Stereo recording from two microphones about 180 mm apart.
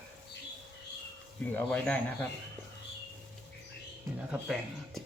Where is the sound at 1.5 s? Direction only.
10° left (ahead or behind).